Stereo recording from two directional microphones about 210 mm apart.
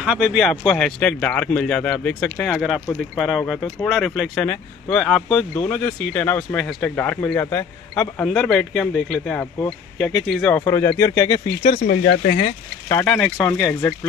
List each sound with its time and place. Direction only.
0.0 s a man's voice: 5° right (ahead or behind)
10.6 s speech: 15° left (ahead or behind)
11.8 s speech: 50° left (ahead or behind)
12.8 s speech: 10° left (ahead or behind)